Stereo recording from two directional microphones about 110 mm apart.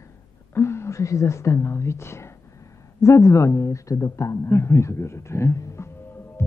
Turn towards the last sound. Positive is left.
turn(degrees=20)  # may be behind; listen again after turning